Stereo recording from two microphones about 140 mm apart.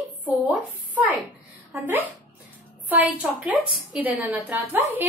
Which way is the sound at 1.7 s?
15° right (ahead or behind).